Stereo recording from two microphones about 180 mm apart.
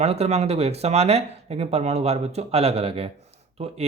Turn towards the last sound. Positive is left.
turn(degrees=-30)  # may be behind; listen again after turning